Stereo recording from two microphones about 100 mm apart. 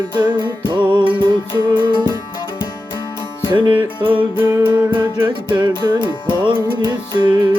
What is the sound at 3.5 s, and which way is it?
Music, 50° right (ahead or behind).